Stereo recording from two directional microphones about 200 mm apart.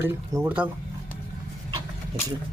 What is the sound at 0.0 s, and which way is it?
Speech, 10° right (ahead or behind).